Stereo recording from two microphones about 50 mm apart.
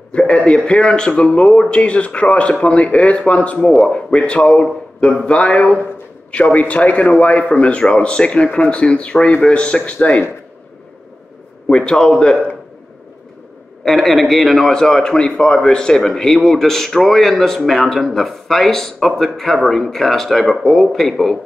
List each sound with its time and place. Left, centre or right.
0.1 s a sound: left
0.4 s speech: centre
11.7 s a man's voice: centre
13.8 s speech: centre
14.7 s a man's voice: centre